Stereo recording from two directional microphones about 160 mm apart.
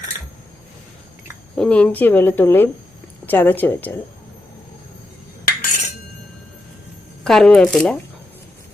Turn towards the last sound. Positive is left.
turn(degrees=5)  # may be behind; listen again after turning